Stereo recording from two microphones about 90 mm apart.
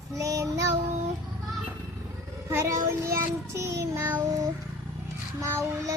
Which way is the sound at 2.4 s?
30° right (ahead or behind).